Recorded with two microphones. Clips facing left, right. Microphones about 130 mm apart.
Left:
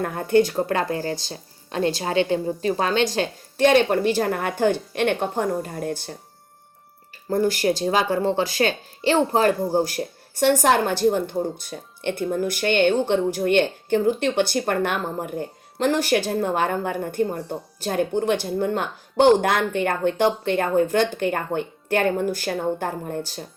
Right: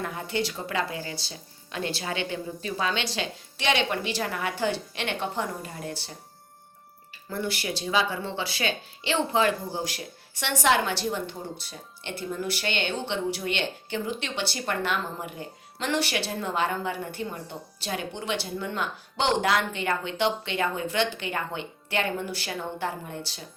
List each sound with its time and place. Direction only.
0.0 s speech: 50° left (ahead or behind)
7.3 s speech: 45° left (ahead or behind)